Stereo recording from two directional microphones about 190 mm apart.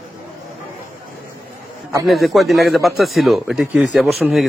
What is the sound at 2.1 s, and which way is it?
Speech, centre (ahead or behind).